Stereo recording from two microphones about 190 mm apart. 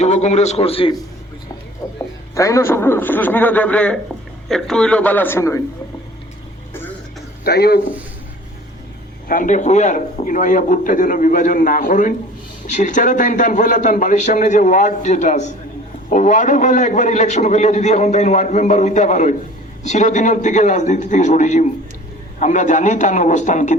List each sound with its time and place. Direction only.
0.0 s a man's voice: 35° left (ahead or behind)
2.3 s a man's voice: 15° left (ahead or behind)
7.4 s speech: 55° left (ahead or behind)
9.3 s a man's voice: 45° left (ahead or behind)